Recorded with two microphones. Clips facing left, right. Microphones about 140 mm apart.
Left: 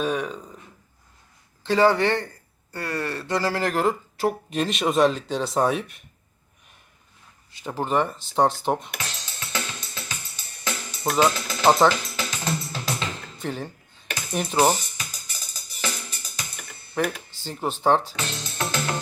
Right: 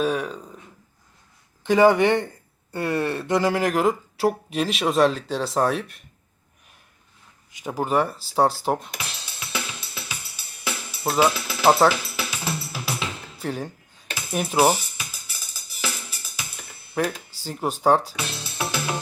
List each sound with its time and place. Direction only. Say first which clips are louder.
0.0 s speech: right 2 dB; centre (ahead or behind)
1.6 s speech: right 3 dB; 15° right (ahead or behind); by 6.0 s centre (ahead or behind)
7.5 s speech: right 1 dB; 10° right (ahead or behind)
8.6 s music: even; 5° right (ahead or behind)
17.3 s speech: right 1 dB; 10° right (ahead or behind)